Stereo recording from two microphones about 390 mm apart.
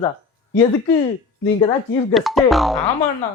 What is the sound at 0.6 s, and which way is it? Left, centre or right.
Speech, centre.